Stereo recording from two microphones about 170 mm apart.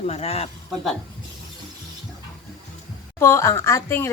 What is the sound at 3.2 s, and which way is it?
Speech, 15° left (ahead or behind).